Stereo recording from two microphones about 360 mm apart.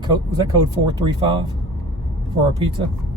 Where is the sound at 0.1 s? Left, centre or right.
Centre.